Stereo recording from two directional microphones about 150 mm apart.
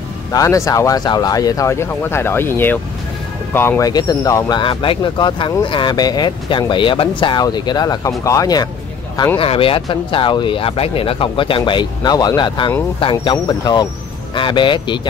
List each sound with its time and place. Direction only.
0.3 s speech: 20° left (ahead or behind)
9.4 s speech: 40° left (ahead or behind)